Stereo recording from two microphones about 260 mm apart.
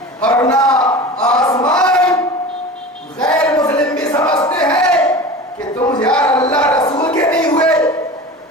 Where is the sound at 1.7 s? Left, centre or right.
Centre.